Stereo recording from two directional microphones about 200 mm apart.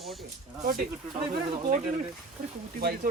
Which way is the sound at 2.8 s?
50° right (ahead or behind).